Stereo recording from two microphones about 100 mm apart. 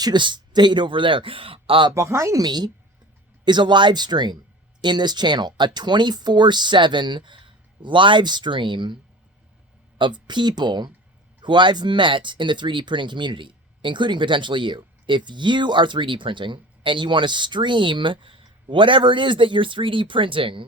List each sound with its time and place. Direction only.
0.0 s a man's voice: 50° right (ahead or behind)
2.0 s speech: 30° right (ahead or behind)
2.4 s speech: 45° right (ahead or behind)
10.0 s speech: 50° right (ahead or behind)